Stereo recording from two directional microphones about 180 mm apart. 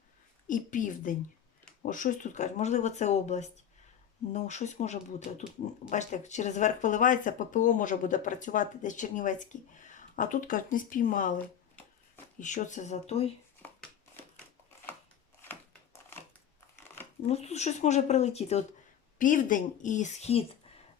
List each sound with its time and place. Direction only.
0.4 s speech: 45° left (ahead or behind)
12.4 s speech: 45° left (ahead or behind)
15.4 s crushing: 10° left (ahead or behind)
16.7 s a sound: 10° left (ahead or behind)
17.2 s speech: 35° left (ahead or behind)
19.2 s speech: 45° left (ahead or behind)